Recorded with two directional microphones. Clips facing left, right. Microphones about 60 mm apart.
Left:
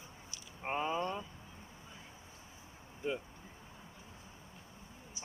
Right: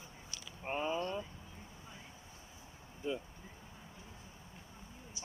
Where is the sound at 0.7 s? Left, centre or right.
Left.